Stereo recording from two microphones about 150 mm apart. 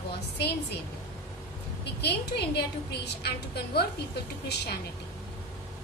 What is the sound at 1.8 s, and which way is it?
A woman's voice, 90° left.